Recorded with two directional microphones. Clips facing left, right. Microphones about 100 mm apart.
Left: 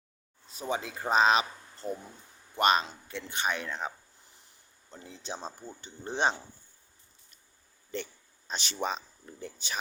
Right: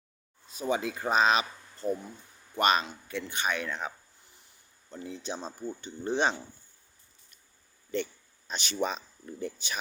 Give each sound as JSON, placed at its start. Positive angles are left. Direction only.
{"t": 0.5, "sound": "speech", "side_deg": 25}
{"t": 1.8, "sound": "speech", "side_deg": -20}
{"t": 2.6, "sound": "speech", "side_deg": 25}
{"t": 5.0, "sound": "speech", "side_deg": 30}
{"t": 8.4, "sound": "speech", "side_deg": 30}